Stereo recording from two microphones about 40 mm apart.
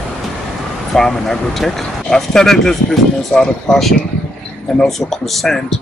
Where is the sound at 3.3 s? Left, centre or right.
Left.